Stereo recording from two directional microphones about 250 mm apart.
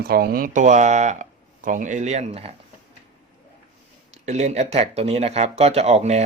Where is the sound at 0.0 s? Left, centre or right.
Right.